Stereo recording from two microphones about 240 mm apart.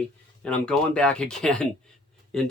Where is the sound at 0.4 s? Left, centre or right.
Centre.